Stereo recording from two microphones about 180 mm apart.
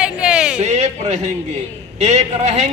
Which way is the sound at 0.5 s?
40° right (ahead or behind).